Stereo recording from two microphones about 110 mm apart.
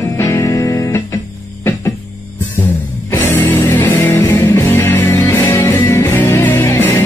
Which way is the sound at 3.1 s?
20° left (ahead or behind).